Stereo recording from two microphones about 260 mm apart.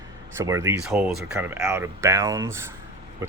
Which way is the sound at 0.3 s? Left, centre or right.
Centre.